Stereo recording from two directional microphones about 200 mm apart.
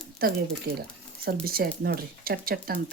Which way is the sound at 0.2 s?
50° right (ahead or behind).